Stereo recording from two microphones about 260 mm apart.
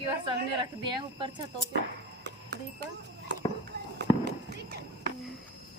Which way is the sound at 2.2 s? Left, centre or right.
Right.